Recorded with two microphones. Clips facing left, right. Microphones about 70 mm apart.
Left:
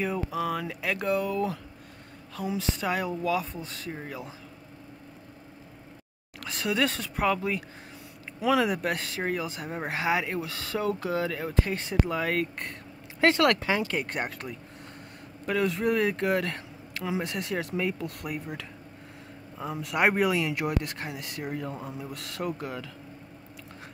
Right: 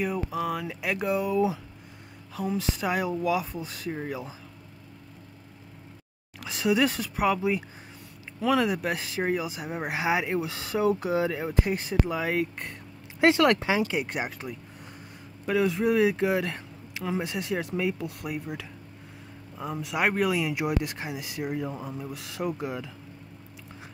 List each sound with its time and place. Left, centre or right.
0.0 s speech: centre
2.3 s speech: centre
6.4 s speech: centre
8.4 s speech: centre
11.8 s speech: centre
13.5 s speech: centre